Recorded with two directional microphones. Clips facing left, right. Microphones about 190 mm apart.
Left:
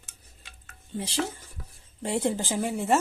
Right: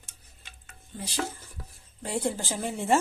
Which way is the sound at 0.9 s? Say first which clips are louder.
Left 3 dB; 25° left (ahead or behind).